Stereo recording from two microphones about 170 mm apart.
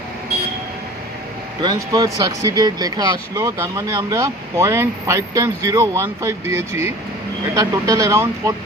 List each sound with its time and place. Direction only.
1.6 s speech: 20° right (ahead or behind)